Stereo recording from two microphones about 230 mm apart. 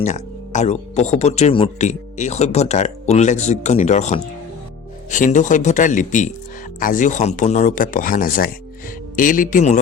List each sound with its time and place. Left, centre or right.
0.0 s speech: left